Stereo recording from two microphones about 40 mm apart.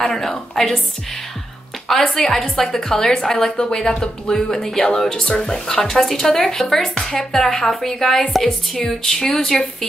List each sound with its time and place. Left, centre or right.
0.0 s speech: centre
2.1 s speech: centre